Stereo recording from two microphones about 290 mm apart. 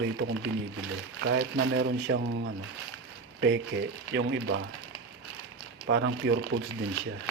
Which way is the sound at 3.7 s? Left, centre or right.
Right.